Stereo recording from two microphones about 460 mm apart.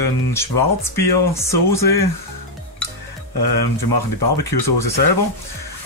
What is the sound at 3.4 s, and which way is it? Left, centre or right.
Speech, left.